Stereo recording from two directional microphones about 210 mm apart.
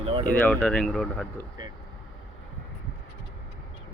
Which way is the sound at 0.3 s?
5° left (ahead or behind).